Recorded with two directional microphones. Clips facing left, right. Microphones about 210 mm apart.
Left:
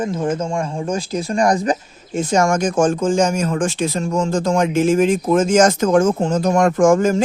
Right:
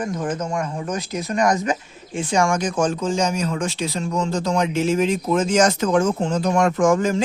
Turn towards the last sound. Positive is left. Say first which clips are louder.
# left 4 dB
turn(degrees=45)  # may be behind; listen again after turning